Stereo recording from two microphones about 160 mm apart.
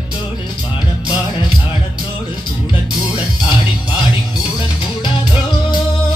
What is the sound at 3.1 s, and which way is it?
Music, 25° left (ahead or behind).